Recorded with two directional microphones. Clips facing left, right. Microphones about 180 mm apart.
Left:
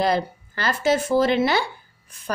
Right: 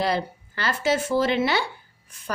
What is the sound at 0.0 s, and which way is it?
A woman's voice, 45° left (ahead or behind).